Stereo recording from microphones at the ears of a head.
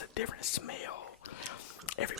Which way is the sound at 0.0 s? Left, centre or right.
Left.